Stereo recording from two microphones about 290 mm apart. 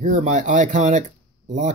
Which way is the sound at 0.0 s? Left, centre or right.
Right.